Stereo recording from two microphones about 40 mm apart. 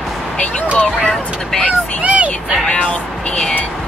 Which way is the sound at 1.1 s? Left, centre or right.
Centre.